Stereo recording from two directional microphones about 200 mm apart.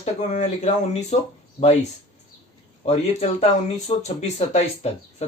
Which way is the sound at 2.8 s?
30° left (ahead or behind).